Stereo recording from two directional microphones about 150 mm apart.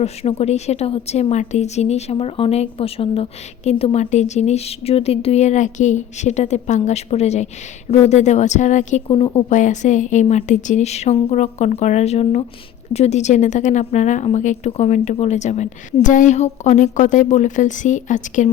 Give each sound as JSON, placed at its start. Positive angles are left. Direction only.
{"t": 0.0, "sound": "a woman's voice", "side_deg": 45}
{"t": 9.0, "sound": "speech", "side_deg": 40}
{"t": 9.5, "sound": "a woman's voice", "side_deg": 55}